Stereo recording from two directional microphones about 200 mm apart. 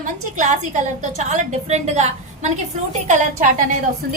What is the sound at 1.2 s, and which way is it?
A woman's voice, 35° right (ahead or behind).